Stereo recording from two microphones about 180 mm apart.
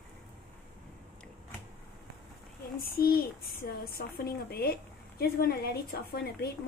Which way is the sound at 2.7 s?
55° left (ahead or behind).